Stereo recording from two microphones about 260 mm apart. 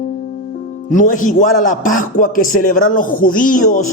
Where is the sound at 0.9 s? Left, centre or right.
Left.